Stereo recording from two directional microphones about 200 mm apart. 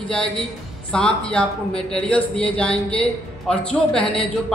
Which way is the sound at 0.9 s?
5° left (ahead or behind).